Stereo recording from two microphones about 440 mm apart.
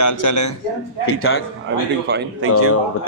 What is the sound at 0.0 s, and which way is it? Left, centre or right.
Speech, left.